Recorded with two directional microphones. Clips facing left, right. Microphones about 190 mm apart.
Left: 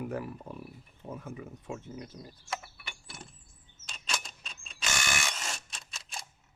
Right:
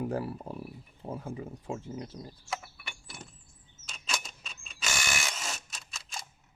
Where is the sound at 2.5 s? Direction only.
Centre (ahead or behind).